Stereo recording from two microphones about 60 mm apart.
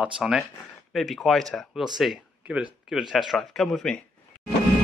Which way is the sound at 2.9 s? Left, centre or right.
Centre.